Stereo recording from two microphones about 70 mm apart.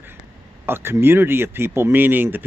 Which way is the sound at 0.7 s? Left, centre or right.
Right.